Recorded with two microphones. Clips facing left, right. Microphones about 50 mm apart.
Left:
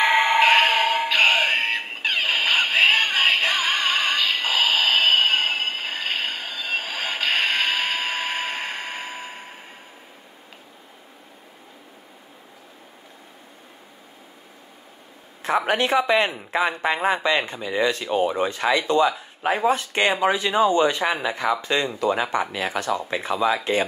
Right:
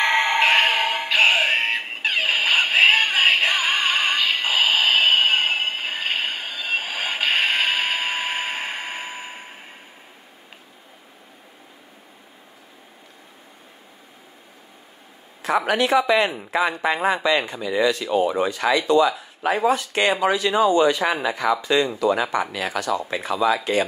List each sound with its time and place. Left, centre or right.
0.0 s music: centre
15.4 s a woman's voice: left
21.4 s speech: centre
22.3 s speech: left